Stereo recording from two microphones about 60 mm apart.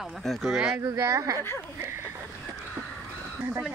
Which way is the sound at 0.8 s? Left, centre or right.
Right.